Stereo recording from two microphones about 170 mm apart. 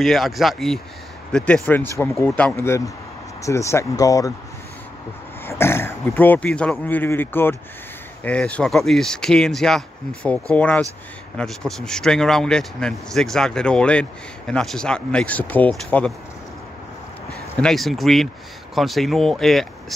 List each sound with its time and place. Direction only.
0.0 s speech: centre (ahead or behind); by 4.3 s 20° left (ahead or behind)
5.4 s speech: 15° left (ahead or behind)
17.6 s speech: centre (ahead or behind)